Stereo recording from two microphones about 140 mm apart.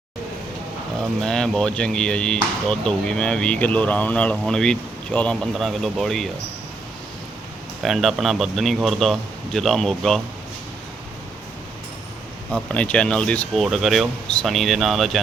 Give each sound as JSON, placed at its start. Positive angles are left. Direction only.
{"t": 1.2, "sound": "speech", "side_deg": 5}
{"t": 7.8, "sound": "speech", "side_deg": 0}
{"t": 12.5, "sound": "speech", "side_deg": 10}